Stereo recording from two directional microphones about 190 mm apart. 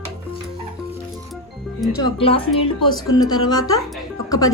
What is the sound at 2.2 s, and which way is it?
Speech, 30° left (ahead or behind).